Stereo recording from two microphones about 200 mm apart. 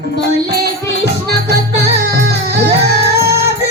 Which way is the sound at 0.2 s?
55° right (ahead or behind).